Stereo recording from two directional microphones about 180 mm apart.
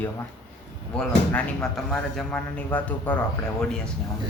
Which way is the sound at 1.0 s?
5° left (ahead or behind).